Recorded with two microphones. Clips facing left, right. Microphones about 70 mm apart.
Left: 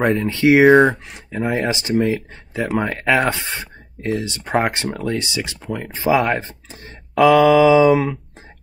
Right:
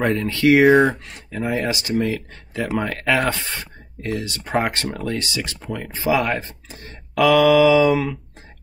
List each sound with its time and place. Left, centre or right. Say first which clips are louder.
0.1 s speech: left 2 dB; left
0.5 s speech: left 2 dB; centre
0.9 s speech: left 3 dB; left